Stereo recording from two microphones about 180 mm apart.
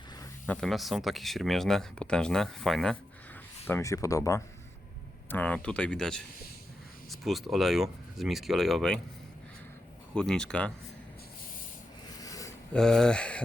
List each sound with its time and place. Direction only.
0.4 s speech: 5° left (ahead or behind)
3.7 s speech: 15° left (ahead or behind)
10.2 s speech: 5° left (ahead or behind)
12.2 s a sound: 20° left (ahead or behind)
12.7 s speech: 5° left (ahead or behind)